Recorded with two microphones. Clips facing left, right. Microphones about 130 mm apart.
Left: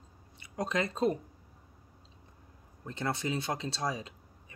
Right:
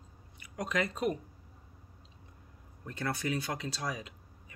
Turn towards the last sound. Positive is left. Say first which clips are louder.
# left 3 dB
turn(degrees=25)  # may be behind; listen again after turning